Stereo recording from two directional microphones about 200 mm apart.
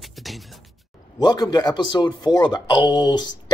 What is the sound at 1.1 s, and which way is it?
A man's voice, 20° left (ahead or behind).